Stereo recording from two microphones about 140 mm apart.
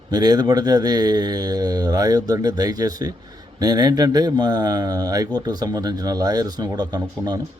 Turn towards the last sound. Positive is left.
turn(degrees=-30)  # may be behind; listen again after turning